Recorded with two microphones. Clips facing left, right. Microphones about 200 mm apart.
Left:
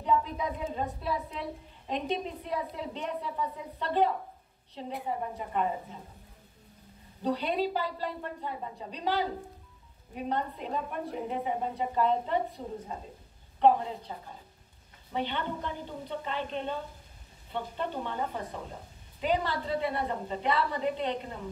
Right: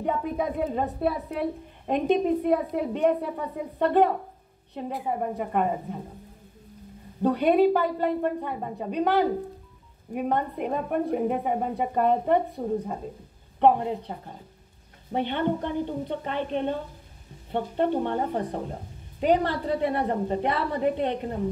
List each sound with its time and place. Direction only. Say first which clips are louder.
0.0 s a woman's voice: right 2 dB; 55° right (ahead or behind)
7.2 s a woman's voice: right 9 dB; 55° right (ahead or behind)